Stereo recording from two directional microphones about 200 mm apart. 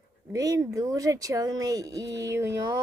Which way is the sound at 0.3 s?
15° right (ahead or behind).